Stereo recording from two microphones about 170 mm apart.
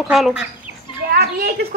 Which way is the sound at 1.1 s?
65° right (ahead or behind).